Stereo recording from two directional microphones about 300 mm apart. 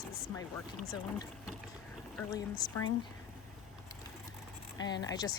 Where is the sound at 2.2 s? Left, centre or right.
Centre.